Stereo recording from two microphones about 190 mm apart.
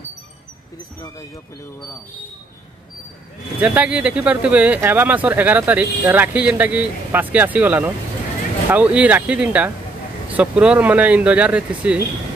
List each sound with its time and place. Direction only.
3.6 s speech: 10° right (ahead or behind)